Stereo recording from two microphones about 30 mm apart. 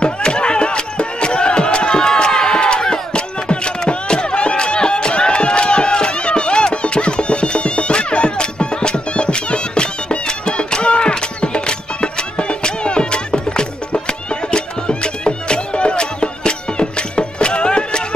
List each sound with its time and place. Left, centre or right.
0.0 s music: left